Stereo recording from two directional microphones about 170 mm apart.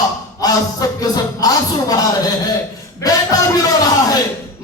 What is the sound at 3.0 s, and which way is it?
Speech, 20° left (ahead or behind).